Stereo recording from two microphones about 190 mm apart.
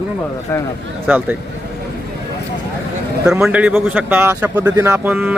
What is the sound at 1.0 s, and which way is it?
Speech, 10° right (ahead or behind).